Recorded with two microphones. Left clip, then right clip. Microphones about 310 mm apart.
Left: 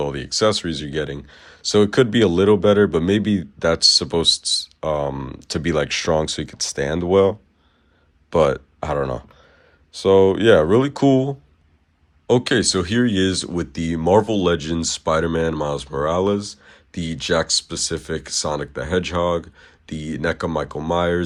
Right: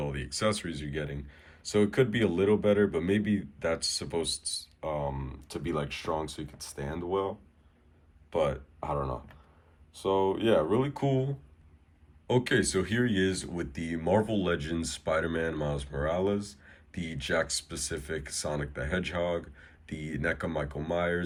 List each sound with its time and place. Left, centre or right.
0.0 s speech: centre
8.9 s speech: left
10.8 s speech: centre